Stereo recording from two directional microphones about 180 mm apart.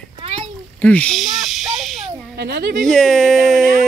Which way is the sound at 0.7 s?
10° left (ahead or behind).